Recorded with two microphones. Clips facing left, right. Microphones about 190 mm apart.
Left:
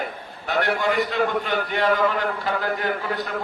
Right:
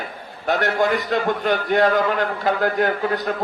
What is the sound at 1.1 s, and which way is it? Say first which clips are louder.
A man's voice: right 3 dB; 45° right (ahead or behind).